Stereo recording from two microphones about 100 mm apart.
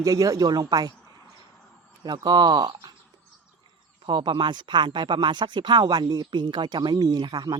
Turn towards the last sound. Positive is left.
turn(degrees=-45)  # may be behind; listen again after turning